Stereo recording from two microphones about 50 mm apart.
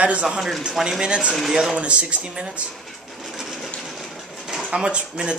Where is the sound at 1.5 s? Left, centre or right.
Centre.